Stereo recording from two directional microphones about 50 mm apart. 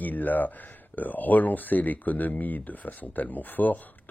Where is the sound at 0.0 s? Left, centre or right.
Left.